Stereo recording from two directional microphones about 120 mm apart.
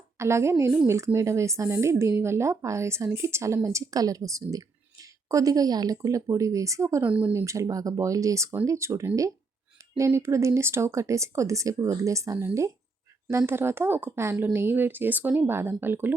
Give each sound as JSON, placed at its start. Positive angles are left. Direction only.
{"t": 0.2, "sound": "speech", "side_deg": -25}
{"t": 7.0, "sound": "speech", "side_deg": -10}
{"t": 7.3, "sound": "speech", "side_deg": -25}